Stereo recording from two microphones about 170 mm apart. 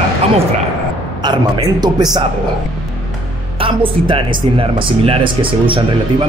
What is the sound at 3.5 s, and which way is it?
Speech, 30° right (ahead or behind).